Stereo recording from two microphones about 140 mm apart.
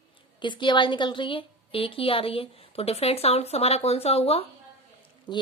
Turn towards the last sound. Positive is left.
turn(degrees=35)  # may be behind; listen again after turning